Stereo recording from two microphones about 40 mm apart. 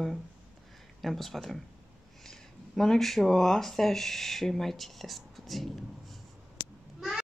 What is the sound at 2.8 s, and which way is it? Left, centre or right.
Speech, centre.